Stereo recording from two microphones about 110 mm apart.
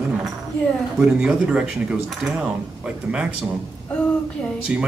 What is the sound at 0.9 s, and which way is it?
Speech, 10° right (ahead or behind).